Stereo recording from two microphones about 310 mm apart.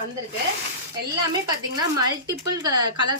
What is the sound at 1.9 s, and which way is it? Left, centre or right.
Speech, centre.